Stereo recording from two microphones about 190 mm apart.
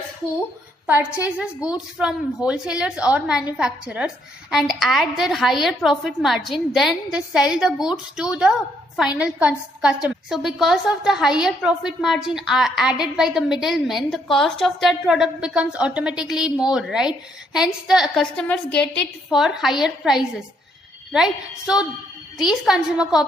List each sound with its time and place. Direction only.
1.2 s a woman's voice: 5° right (ahead or behind)